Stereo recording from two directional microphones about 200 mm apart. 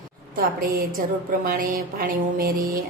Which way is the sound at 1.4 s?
45° right (ahead or behind).